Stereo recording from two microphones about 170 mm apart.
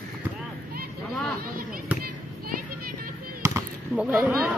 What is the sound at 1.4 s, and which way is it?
Speech, 60° right (ahead or behind).